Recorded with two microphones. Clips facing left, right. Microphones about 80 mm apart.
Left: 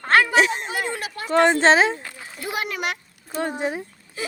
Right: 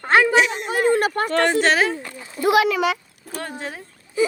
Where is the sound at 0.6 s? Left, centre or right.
Right.